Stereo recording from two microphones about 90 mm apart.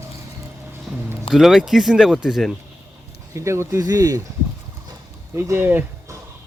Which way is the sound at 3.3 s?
30° right (ahead or behind).